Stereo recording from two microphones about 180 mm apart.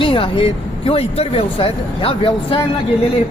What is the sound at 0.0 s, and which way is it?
A woman's voice, 30° left (ahead or behind).